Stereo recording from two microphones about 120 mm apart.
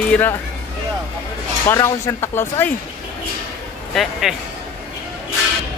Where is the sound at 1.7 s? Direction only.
25° left (ahead or behind).